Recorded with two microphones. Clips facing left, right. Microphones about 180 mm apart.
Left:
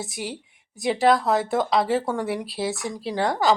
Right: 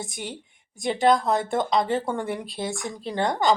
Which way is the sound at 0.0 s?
5° left (ahead or behind).